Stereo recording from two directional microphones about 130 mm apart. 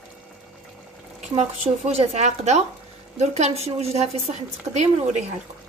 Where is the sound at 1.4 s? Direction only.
55° right (ahead or behind).